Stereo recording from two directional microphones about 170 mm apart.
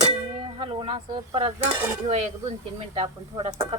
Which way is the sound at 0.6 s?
30° right (ahead or behind).